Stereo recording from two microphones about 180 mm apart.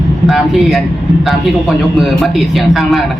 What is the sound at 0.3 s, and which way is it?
A man's voice, centre (ahead or behind).